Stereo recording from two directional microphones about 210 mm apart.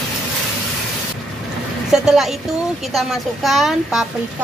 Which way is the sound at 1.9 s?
Centre (ahead or behind).